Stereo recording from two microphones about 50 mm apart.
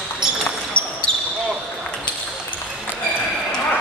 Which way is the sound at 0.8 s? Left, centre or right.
Left.